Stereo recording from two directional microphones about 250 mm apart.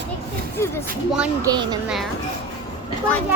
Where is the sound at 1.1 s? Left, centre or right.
Centre.